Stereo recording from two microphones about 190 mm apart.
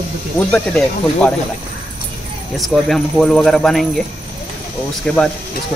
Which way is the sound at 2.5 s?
Centre (ahead or behind).